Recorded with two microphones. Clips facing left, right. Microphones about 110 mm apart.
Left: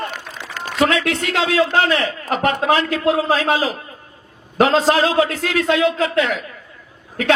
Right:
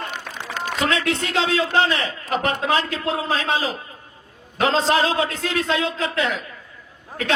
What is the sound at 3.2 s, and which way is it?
Speech, 30° left (ahead or behind).